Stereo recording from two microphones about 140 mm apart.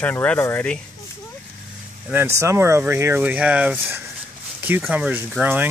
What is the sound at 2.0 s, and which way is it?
Speech, 15° right (ahead or behind).